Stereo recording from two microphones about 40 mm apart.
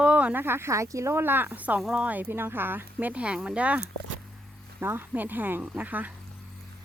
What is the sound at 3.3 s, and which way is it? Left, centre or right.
Speech, right.